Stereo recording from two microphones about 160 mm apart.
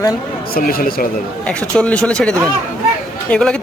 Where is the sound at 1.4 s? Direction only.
5° left (ahead or behind).